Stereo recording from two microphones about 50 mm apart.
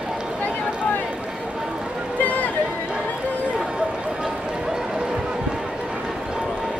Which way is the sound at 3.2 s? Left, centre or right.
Left.